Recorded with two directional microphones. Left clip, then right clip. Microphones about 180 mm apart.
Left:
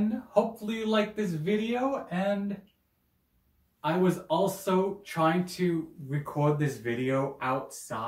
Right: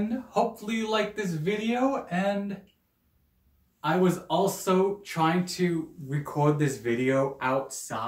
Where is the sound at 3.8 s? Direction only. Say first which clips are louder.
Right 2 dB; 20° right (ahead or behind).